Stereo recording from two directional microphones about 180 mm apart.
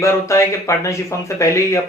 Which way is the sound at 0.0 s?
15° left (ahead or behind).